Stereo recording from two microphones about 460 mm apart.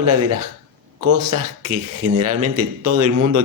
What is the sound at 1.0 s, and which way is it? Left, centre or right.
A man's voice, right.